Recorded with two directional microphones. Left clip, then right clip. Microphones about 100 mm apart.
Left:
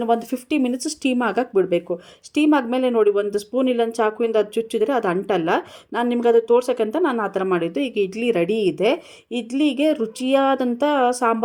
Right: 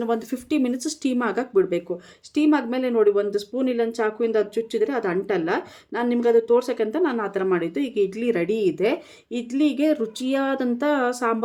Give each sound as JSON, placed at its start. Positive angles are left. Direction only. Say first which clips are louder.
{"t": 0.0, "sound": "speech", "louder": "left 5 dB", "side_deg": 20}